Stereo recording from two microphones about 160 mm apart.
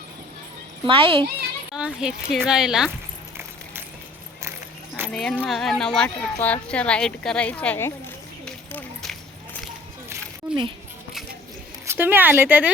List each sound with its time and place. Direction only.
0.9 s speech: 35° right (ahead or behind)
1.7 s speech: 5° right (ahead or behind)
5.1 s speech: 5° left (ahead or behind)
8.4 s a sound: 5° left (ahead or behind)
10.5 s a sound: 10° right (ahead or behind)
11.9 s speech: 15° right (ahead or behind)